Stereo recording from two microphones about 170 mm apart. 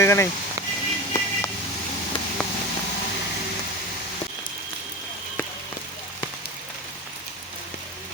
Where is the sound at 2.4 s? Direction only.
5° left (ahead or behind).